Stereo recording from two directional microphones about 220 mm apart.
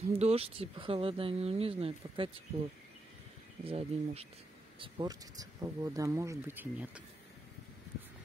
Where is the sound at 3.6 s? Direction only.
25° right (ahead or behind); by 7.0 s 5° right (ahead or behind).